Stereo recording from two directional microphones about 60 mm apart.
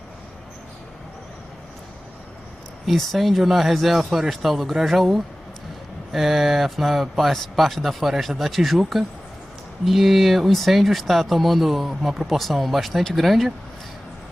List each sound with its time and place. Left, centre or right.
2.8 s speech: centre